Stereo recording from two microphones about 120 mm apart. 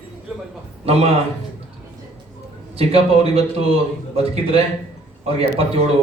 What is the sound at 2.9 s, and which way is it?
A man's voice, 55° right (ahead or behind).